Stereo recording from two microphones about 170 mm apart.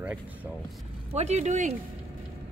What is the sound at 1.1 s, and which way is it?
Speech, 40° right (ahead or behind).